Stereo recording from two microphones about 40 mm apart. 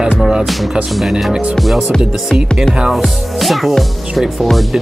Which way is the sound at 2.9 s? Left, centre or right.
Centre.